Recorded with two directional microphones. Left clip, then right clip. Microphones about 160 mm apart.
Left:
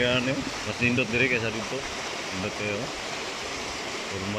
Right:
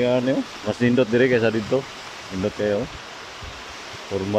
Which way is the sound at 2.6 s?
55° right (ahead or behind).